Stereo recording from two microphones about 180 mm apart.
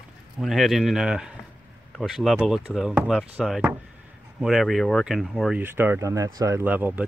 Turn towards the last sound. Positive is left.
turn(degrees=-10)  # may be behind; listen again after turning